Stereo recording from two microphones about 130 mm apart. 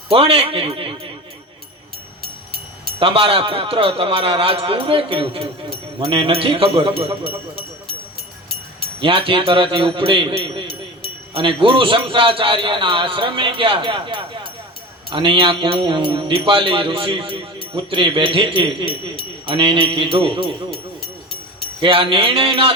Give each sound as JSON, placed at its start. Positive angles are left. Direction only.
{"t": 0.1, "sound": "speech", "side_deg": -50}
{"t": 3.0, "sound": "speech", "side_deg": -45}
{"t": 9.0, "sound": "speech", "side_deg": -45}
{"t": 21.8, "sound": "speech", "side_deg": -45}